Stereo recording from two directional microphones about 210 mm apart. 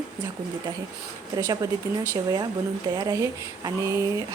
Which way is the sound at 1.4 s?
15° right (ahead or behind).